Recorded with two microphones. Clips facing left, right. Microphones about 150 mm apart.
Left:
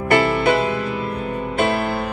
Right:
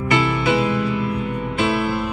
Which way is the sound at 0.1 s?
55° left (ahead or behind).